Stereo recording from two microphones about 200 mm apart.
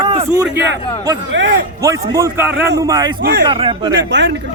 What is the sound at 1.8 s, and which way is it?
Speech, 15° right (ahead or behind).